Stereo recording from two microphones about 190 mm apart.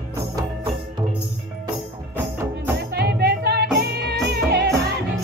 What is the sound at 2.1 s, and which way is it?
Music, 10° right (ahead or behind).